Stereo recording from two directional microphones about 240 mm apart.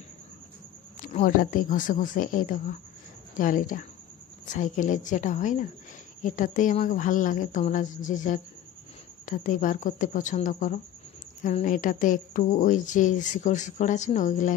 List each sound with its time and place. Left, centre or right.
1.0 s speech: left